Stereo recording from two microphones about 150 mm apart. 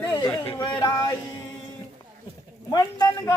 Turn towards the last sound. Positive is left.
turn(degrees=25)  # may be behind; listen again after turning